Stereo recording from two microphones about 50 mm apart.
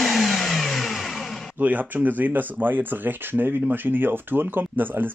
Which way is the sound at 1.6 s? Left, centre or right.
Right.